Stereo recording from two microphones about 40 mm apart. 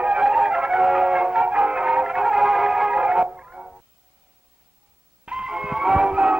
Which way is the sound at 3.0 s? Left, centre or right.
Right.